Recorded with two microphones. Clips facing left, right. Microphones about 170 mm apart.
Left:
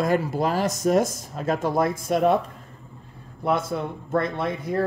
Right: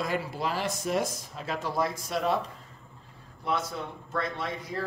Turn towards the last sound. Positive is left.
turn(degrees=55)  # may be behind; listen again after turning